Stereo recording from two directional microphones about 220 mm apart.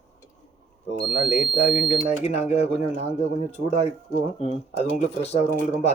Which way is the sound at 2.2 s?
30° left (ahead or behind).